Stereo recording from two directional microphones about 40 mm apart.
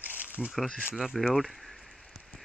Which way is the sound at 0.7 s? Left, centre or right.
Right.